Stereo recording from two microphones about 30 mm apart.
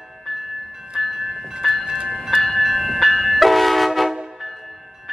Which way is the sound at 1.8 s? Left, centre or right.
Right.